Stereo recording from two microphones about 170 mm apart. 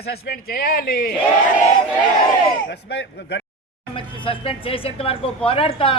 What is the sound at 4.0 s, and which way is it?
A woman's voice, 30° left (ahead or behind).